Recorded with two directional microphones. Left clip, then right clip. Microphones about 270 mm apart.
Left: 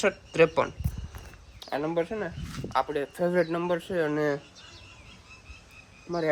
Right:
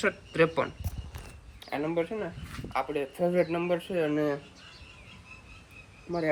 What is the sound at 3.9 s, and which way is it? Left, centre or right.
Speech, centre.